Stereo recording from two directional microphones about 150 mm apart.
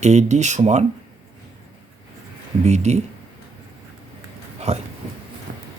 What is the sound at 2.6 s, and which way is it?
Speech, 50° right (ahead or behind).